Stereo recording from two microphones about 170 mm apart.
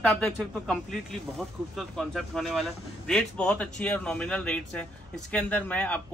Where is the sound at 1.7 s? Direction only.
Centre (ahead or behind).